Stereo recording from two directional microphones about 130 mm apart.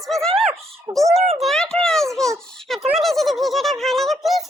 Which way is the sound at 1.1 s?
55° right (ahead or behind).